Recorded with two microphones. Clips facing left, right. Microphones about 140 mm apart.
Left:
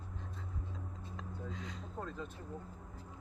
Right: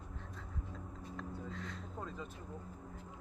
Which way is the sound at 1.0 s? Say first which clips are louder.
Right 2 dB; 15° left (ahead or behind).